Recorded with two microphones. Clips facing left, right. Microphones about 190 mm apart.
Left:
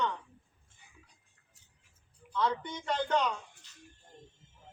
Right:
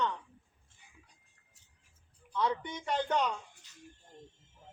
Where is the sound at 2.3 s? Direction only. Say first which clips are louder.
Left 1 dB; 15° right (ahead or behind).